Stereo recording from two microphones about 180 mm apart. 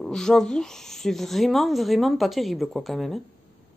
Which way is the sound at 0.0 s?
5° left (ahead or behind).